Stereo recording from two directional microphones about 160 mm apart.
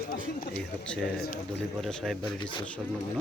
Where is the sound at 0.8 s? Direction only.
5° left (ahead or behind).